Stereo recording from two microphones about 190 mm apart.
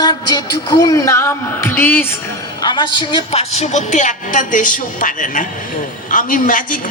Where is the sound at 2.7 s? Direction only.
25° left (ahead or behind).